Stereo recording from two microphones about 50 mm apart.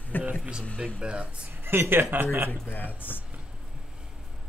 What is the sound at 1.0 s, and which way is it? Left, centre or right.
Speech, right.